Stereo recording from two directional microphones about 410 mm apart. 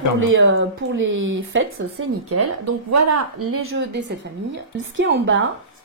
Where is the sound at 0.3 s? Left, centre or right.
Right.